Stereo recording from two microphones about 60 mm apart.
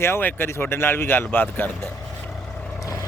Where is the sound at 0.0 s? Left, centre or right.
Left.